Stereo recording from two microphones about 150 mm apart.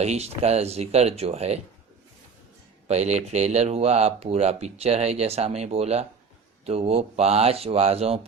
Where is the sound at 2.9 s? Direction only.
45° right (ahead or behind).